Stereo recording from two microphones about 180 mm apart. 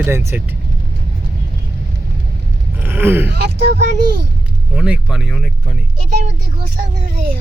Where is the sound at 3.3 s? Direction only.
65° right (ahead or behind).